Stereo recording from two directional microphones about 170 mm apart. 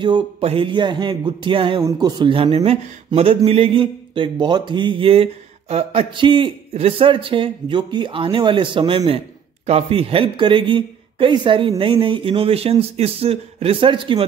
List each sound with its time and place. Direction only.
0.0 s a man's voice: 30° right (ahead or behind)